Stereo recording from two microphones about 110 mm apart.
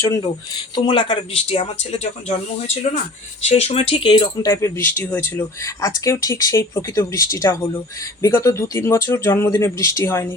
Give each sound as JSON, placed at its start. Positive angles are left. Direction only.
{"t": 0.8, "sound": "speech", "side_deg": 50}
{"t": 3.5, "sound": "speech", "side_deg": 65}
{"t": 4.4, "sound": "speech", "side_deg": 25}
{"t": 5.6, "sound": "speech", "side_deg": 30}